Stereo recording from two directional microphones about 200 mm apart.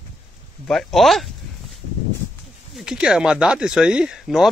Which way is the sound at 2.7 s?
Centre (ahead or behind).